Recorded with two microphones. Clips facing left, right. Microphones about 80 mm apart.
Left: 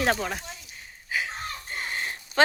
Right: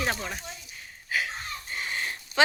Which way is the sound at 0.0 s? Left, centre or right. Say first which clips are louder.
Left 5 dB; left.